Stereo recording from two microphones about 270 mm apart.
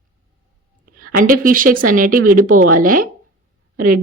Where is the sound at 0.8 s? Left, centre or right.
Right.